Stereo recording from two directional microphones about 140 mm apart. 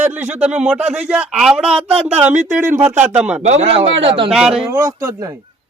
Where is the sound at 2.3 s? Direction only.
60° right (ahead or behind).